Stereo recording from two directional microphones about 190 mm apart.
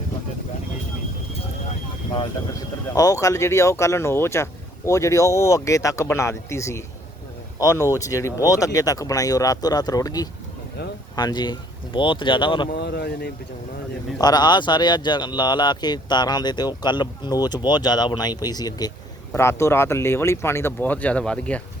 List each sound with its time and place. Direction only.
2.9 s speech: 20° left (ahead or behind)
12.7 s speech: 60° left (ahead or behind)
14.2 s speech: 20° left (ahead or behind)